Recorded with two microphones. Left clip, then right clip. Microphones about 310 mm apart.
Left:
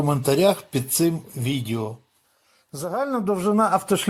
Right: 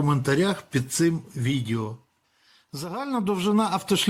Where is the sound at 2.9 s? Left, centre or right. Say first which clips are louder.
Left 4 dB; centre.